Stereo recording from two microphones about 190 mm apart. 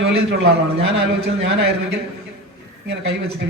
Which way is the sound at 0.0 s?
65° right (ahead or behind).